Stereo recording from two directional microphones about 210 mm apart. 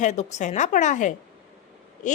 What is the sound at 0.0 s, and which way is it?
A woman's voice, 35° left (ahead or behind).